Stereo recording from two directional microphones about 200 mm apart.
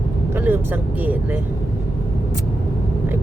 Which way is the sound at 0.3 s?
10° right (ahead or behind).